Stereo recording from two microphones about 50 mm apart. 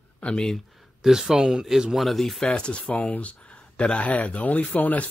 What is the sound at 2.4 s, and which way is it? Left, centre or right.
Speech, left.